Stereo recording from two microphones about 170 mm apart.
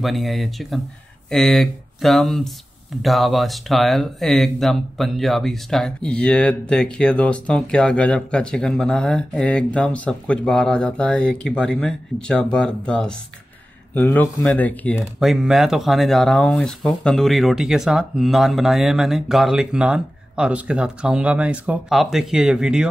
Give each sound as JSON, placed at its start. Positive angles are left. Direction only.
{"t": 0.0, "sound": "speech", "side_deg": 0}
{"t": 15.1, "sound": "speech", "side_deg": 0}